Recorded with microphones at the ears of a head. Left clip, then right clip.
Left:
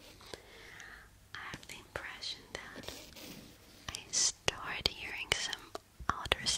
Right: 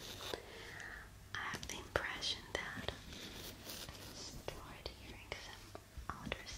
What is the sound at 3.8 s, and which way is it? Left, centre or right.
Whispering, left.